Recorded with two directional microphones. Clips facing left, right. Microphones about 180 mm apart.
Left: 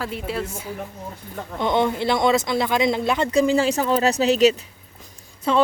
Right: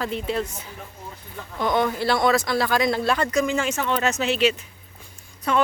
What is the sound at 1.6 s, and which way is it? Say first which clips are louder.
Speech: left 1 dB; 25° left (ahead or behind).